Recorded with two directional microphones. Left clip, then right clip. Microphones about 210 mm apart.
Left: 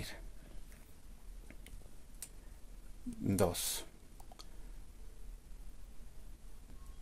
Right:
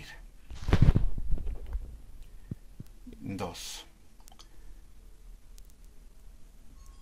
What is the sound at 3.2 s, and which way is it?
Speech, 60° left (ahead or behind).